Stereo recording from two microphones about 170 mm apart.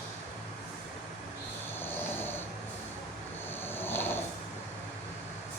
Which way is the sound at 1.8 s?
10° left (ahead or behind).